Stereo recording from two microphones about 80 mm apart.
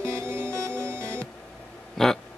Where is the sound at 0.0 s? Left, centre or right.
Right.